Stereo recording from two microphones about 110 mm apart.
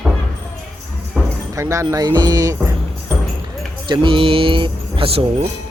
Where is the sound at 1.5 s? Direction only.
25° right (ahead or behind).